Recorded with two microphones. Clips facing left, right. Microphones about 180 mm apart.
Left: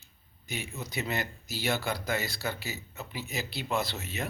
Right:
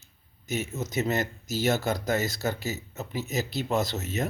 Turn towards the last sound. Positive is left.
turn(degrees=-40)  # may be behind; listen again after turning